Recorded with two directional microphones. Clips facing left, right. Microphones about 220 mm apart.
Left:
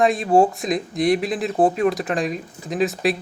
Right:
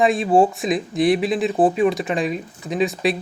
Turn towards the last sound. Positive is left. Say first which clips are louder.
# even
turn(degrees=0)  # may be behind; listen again after turning